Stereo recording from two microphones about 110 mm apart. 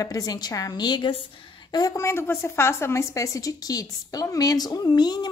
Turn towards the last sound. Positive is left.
turn(degrees=40)  # may be behind; listen again after turning